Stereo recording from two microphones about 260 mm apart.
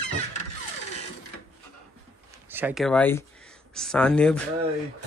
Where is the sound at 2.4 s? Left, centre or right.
Centre.